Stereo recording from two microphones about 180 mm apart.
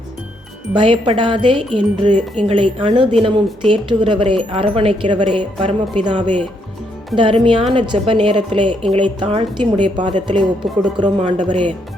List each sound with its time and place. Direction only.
0.7 s speech: 30° right (ahead or behind)
7.1 s speech: centre (ahead or behind)
7.7 s speech: 30° right (ahead or behind)